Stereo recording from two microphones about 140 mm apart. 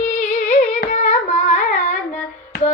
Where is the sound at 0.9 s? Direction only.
55° left (ahead or behind).